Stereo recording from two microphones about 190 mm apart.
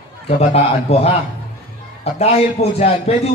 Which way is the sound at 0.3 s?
35° left (ahead or behind).